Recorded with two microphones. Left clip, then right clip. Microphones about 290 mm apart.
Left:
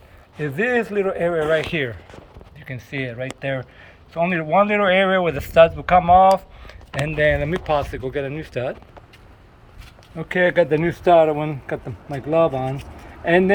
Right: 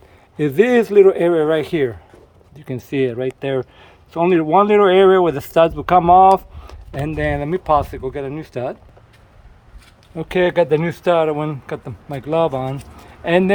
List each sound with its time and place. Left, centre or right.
0.3 s a man's voice: right
7.1 s speech: centre
10.2 s a man's voice: centre